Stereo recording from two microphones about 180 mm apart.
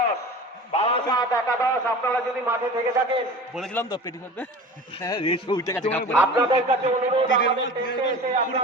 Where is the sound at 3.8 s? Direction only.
20° left (ahead or behind).